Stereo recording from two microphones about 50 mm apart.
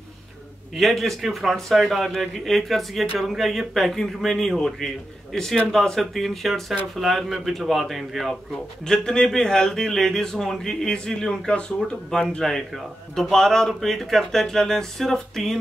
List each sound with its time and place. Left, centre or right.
0.7 s speech: centre
8.8 s speech: centre